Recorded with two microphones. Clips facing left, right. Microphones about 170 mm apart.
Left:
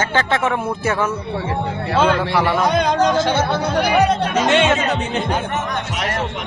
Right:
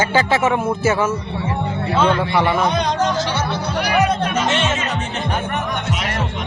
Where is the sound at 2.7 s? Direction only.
50° left (ahead or behind).